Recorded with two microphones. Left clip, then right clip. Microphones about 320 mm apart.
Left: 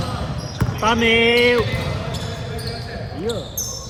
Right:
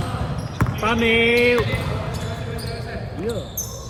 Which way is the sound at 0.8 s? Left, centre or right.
Left.